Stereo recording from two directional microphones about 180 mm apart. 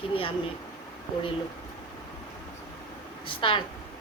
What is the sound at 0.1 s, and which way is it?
Speech, 30° left (ahead or behind).